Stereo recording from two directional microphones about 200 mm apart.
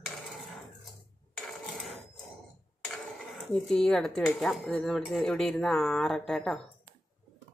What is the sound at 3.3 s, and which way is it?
Speech, centre (ahead or behind).